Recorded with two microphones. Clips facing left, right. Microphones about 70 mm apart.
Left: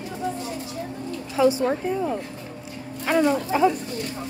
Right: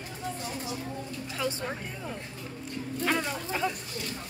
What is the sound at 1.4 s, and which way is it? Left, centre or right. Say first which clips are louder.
Speech: left 14 dB; centre.